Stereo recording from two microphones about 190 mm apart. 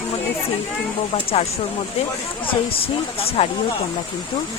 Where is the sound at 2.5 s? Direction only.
30° left (ahead or behind).